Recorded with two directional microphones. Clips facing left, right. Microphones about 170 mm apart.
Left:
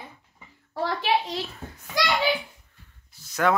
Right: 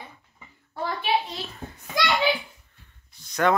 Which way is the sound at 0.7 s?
90° left.